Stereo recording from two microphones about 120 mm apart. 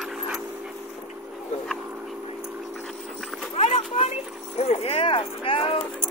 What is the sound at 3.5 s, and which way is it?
Clip-clop, 60° left (ahead or behind).